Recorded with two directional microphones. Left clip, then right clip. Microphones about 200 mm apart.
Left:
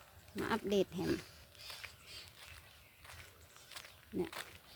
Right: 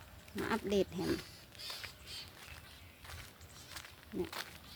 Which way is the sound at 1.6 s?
25° right (ahead or behind).